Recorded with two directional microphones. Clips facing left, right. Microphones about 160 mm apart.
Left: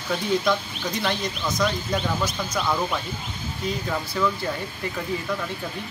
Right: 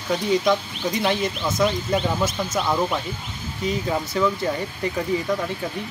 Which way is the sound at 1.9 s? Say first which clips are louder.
Right 3 dB; 20° right (ahead or behind).